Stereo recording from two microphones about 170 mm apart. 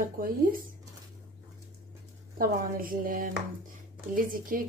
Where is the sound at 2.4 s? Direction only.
55° right (ahead or behind).